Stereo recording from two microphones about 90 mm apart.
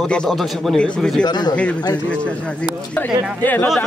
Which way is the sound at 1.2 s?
50° left (ahead or behind).